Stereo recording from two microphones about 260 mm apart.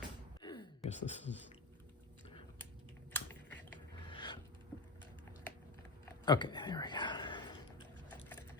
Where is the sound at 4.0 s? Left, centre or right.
Centre.